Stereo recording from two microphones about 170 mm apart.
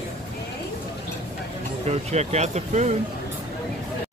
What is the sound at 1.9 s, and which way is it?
Speech, 40° right (ahead or behind).